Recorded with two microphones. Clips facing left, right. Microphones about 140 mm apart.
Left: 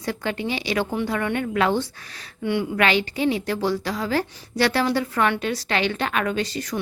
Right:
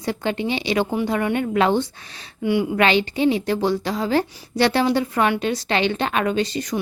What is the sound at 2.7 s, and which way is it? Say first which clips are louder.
A woman's voice: right 3 dB; 25° right (ahead or behind).